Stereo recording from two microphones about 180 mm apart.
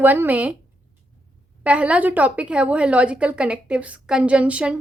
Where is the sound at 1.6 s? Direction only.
5° right (ahead or behind).